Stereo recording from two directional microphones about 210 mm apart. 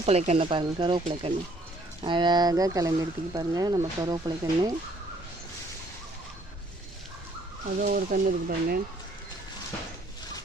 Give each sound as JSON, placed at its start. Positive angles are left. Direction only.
{"t": 0.0, "sound": "speech", "side_deg": -30}
{"t": 7.8, "sound": "speech", "side_deg": -40}